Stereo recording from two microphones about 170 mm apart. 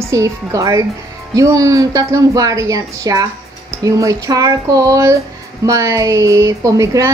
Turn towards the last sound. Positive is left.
turn(degrees=-20)  # may be behind; listen again after turning